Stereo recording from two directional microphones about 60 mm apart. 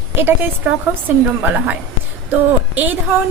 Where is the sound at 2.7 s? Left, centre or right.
Right.